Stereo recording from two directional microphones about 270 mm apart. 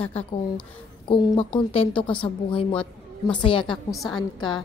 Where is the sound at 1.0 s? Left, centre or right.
Centre.